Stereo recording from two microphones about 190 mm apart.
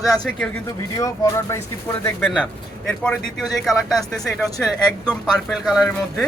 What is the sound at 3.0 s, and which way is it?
A man's voice, 5° left (ahead or behind).